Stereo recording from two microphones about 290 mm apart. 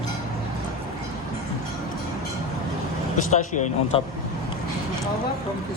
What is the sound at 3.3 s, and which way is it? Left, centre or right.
Speech, left.